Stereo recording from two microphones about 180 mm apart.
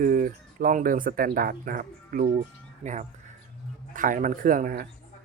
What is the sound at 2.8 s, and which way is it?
Speech, 35° right (ahead or behind).